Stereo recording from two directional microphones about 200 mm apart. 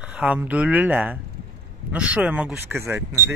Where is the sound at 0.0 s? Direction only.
5° right (ahead or behind).